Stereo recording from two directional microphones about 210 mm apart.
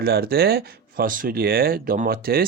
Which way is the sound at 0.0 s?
45° right (ahead or behind).